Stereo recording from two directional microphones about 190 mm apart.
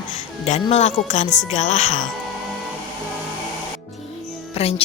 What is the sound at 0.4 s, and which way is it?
Speech, 35° left (ahead or behind).